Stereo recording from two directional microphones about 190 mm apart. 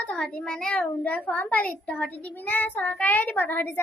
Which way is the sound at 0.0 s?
5° left (ahead or behind).